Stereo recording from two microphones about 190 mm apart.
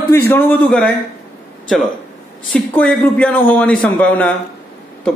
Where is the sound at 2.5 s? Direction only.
5° left (ahead or behind).